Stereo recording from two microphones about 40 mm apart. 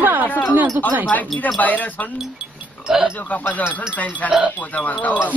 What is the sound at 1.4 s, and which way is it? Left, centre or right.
Wind chime, left.